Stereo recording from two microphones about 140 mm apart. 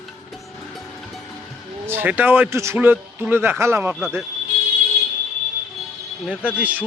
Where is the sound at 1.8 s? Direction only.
15° right (ahead or behind).